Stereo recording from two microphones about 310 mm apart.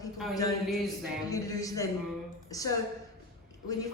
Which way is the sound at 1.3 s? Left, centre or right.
Centre.